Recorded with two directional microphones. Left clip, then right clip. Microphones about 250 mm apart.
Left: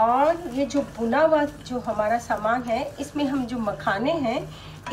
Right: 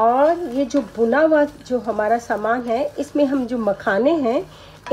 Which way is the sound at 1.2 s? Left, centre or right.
Right.